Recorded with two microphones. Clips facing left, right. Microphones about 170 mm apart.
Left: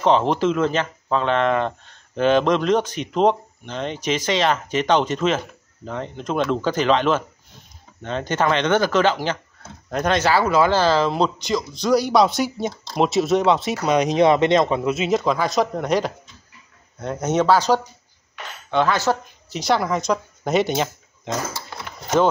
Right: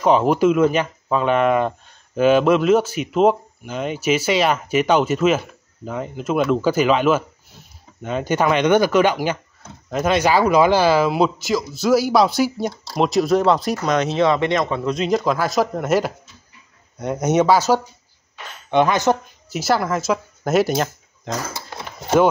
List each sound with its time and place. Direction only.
0.0 s speech: 10° right (ahead or behind)
13.9 s speech: 15° left (ahead or behind)
14.9 s speech: 5° left (ahead or behind); by 19.1 s 15° right (ahead or behind)
19.5 s speech: 5° right (ahead or behind)